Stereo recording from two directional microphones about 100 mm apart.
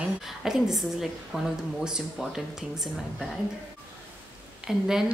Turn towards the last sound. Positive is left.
turn(degrees=-5)  # may be behind; listen again after turning